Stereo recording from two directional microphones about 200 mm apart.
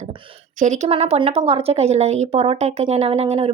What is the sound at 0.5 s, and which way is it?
Speech, 35° right (ahead or behind).